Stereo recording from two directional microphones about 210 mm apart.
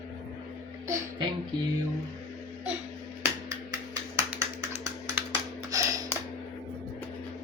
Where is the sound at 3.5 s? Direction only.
15° right (ahead or behind).